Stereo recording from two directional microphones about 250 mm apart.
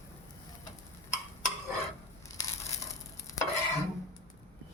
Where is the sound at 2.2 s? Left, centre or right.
Centre.